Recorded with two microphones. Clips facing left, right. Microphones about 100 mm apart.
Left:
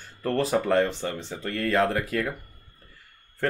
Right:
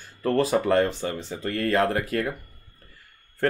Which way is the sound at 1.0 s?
45° right (ahead or behind).